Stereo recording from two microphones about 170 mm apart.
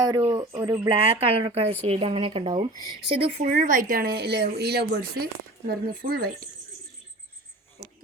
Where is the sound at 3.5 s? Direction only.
50° right (ahead or behind).